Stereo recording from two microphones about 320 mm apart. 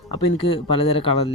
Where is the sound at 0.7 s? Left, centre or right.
Centre.